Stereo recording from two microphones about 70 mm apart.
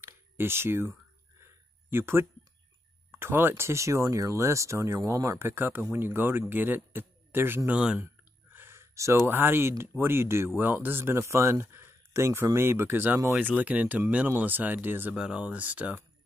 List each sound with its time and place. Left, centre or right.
0.0 s a sound: right
3.1 s speech: right
5.5 s a man's voice: right
7.7 s speech: centre
8.0 s a sound: right
8.9 s speech: right
15.1 s speech: centre